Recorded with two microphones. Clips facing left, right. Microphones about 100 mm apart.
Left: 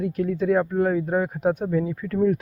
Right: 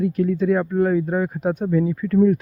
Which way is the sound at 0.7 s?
25° left (ahead or behind).